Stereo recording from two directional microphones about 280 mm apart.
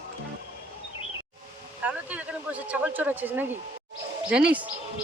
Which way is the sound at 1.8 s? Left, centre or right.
Centre.